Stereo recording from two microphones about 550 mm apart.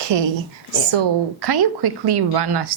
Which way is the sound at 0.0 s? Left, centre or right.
Right.